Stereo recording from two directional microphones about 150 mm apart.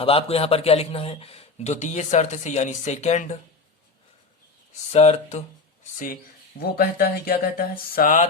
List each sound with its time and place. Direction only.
0.0 s speech: 40° left (ahead or behind)
4.9 s speech: 45° left (ahead or behind)
6.6 s speech: 85° left; by 8.3 s 65° left (ahead or behind)